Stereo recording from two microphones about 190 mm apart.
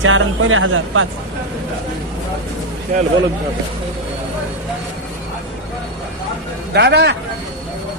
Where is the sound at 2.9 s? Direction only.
50° right (ahead or behind).